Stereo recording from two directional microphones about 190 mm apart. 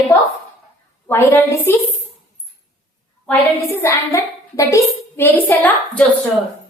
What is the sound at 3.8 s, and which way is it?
A child's voice, 15° left (ahead or behind).